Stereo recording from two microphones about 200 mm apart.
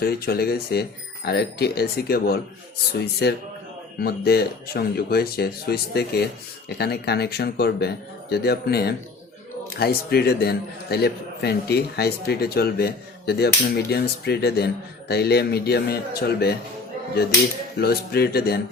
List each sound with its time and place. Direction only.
0.0 s a man's voice: 50° left (ahead or behind)
17.7 s a man's voice: 50° left (ahead or behind)